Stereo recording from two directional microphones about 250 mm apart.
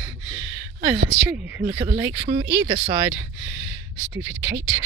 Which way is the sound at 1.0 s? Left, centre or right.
Centre.